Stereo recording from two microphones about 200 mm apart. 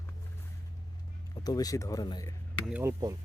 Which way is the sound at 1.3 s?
20° left (ahead or behind).